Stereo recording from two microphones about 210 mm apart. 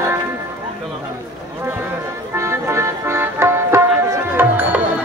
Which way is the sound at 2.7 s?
10° right (ahead or behind).